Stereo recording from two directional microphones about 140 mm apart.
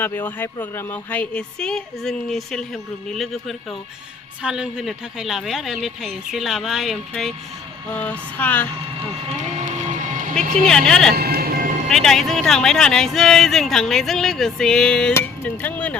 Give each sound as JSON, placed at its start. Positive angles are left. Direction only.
{"t": 0.0, "sound": "a woman's voice", "side_deg": 15}
{"t": 9.6, "sound": "music", "side_deg": -60}
{"t": 10.7, "sound": "speech", "side_deg": 5}
{"t": 11.3, "sound": "music", "side_deg": -90}
{"t": 11.9, "sound": "a woman's voice", "side_deg": 0}